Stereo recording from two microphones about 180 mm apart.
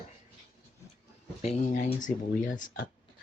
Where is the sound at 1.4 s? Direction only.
40° left (ahead or behind).